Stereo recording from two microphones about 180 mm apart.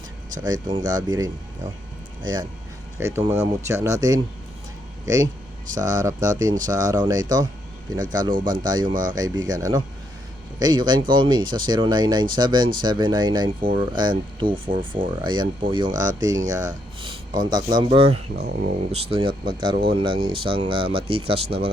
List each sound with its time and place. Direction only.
0.4 s speech: 20° right (ahead or behind)